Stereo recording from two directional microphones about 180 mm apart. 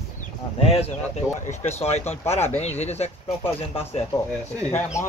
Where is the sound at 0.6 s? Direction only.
35° left (ahead or behind).